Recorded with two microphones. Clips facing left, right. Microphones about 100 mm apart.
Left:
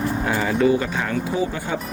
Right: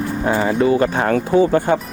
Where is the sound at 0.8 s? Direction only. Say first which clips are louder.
Right 7 dB; 50° right (ahead or behind).